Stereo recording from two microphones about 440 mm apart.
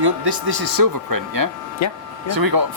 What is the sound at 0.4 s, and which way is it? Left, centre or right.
Speech, right.